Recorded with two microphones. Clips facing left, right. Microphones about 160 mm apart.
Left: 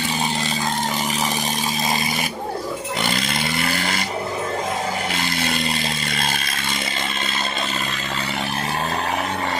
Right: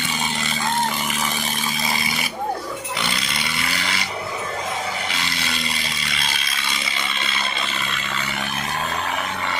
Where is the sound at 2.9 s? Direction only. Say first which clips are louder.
Left 4 dB; 45° left (ahead or behind).